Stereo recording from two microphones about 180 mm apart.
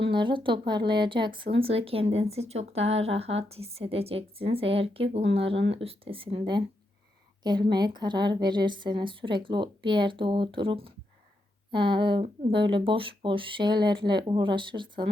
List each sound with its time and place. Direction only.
0.0 s a woman's voice: 25° right (ahead or behind)